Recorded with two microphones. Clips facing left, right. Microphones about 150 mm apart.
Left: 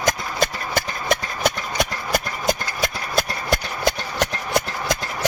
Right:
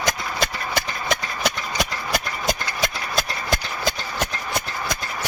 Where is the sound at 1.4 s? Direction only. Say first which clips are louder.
Left 3 dB; 50° left (ahead or behind).